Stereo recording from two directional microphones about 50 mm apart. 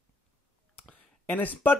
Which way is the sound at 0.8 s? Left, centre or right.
Left.